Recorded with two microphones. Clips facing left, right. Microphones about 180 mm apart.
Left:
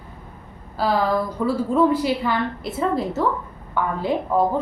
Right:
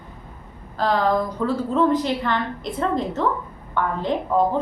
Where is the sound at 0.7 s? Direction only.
5° left (ahead or behind).